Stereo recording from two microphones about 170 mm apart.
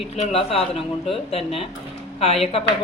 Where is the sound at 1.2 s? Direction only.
35° left (ahead or behind).